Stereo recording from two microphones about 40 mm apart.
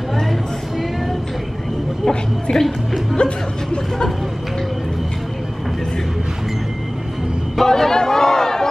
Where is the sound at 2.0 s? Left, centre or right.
Centre.